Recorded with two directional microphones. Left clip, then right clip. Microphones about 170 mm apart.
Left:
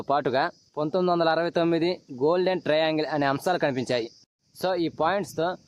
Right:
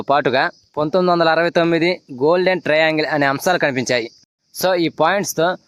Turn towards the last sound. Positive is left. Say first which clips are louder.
# right 9 dB
turn(degrees=-30)  # may be behind; listen again after turning